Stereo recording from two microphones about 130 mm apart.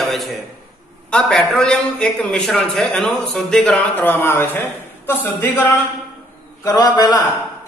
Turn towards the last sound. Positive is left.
turn(degrees=30)  # may be behind; listen again after turning